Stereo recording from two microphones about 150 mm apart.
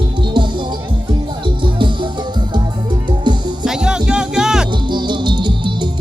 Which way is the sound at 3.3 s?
30° right (ahead or behind).